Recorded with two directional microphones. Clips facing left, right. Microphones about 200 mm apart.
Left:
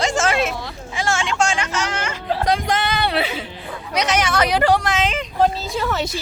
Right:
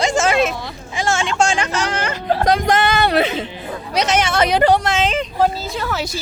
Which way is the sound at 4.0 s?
25° right (ahead or behind).